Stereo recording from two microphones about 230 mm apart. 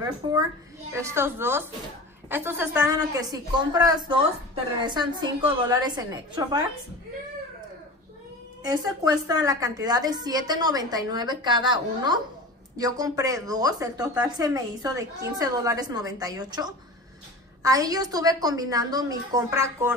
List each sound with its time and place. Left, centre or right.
0.9 s a woman's voice: centre
8.6 s speech: centre